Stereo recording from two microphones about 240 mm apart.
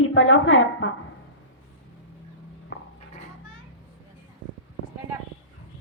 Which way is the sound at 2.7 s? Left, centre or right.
Left.